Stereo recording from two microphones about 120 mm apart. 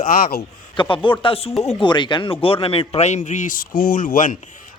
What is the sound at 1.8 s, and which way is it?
Speech, 40° left (ahead or behind).